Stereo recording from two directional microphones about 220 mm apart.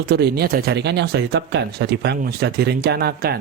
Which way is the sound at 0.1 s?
45° right (ahead or behind).